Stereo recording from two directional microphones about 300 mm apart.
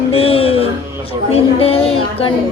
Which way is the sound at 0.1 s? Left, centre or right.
Centre.